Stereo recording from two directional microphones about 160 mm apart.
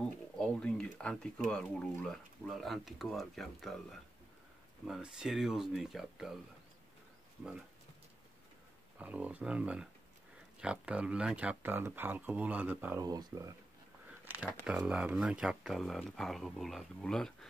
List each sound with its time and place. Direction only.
0.4 s speech: 5° left (ahead or behind)
8.9 s speech: 10° right (ahead or behind)
13.0 s speech: 25° right (ahead or behind)
14.7 s speech: 5° right (ahead or behind)